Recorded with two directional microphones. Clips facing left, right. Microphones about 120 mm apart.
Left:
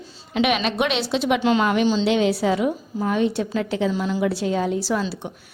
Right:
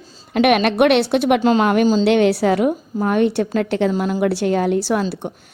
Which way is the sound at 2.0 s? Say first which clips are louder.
Right 5 dB; 60° right (ahead or behind).